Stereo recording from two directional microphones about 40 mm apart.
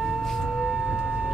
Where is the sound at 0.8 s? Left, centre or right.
Centre.